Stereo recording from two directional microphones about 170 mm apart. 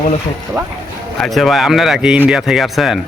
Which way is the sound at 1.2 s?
Centre (ahead or behind).